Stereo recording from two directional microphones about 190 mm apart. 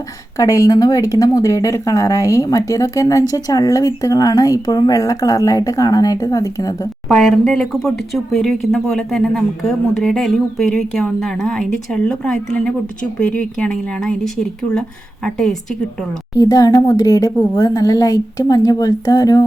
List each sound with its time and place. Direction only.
0.3 s speech: 15° left (ahead or behind)
7.1 s speech: centre (ahead or behind)
16.4 s speech: 20° left (ahead or behind)